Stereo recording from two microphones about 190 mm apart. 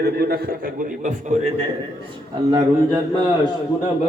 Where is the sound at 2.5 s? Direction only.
20° right (ahead or behind).